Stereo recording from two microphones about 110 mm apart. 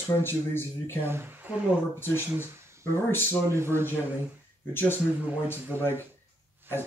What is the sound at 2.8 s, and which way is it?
Speech, 20° left (ahead or behind).